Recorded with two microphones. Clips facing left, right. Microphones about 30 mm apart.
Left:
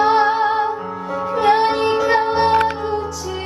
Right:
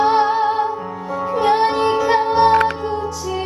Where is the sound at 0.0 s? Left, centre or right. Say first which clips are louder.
Even; centre.